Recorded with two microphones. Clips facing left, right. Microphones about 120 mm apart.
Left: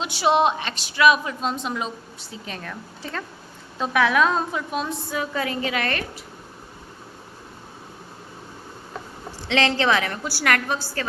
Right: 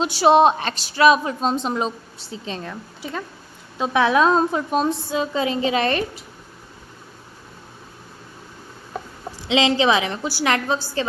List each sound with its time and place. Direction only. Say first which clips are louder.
0.0 s a woman's voice: right 5 dB; 35° right (ahead or behind)
3.0 s speech: right 3 dB; 10° right (ahead or behind)
3.8 s a woman's voice: right 2 dB; 25° right (ahead or behind)
5.1 s a woman's voice: right 1 dB; 20° right (ahead or behind)
9.5 s a woman's voice: right 3 dB; 15° right (ahead or behind)